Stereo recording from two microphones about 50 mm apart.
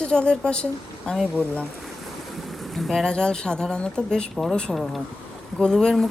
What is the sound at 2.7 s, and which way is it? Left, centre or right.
Speech, centre.